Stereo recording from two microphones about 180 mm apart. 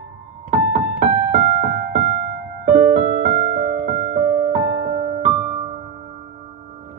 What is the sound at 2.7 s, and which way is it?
Music, 45° right (ahead or behind).